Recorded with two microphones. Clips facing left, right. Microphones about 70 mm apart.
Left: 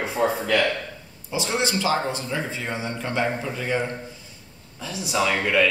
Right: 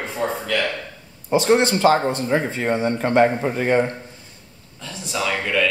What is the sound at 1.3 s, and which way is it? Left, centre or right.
A man's voice, right.